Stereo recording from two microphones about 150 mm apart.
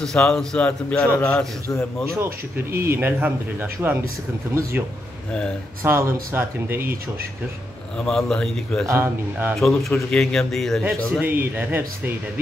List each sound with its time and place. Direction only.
0.0 s a man's voice: 5° left (ahead or behind)
2.1 s speech: 15° right (ahead or behind)
5.8 s speech: 15° right (ahead or behind)
8.0 s a man's voice: 5° left (ahead or behind)
8.8 s speech: 15° right (ahead or behind)
9.6 s a man's voice: centre (ahead or behind)